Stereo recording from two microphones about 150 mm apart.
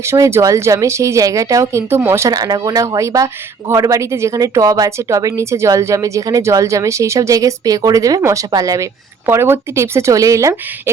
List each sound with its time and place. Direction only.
0.1 s speech: 20° right (ahead or behind)